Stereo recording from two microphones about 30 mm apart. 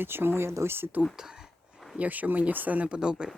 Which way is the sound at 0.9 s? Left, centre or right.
Right.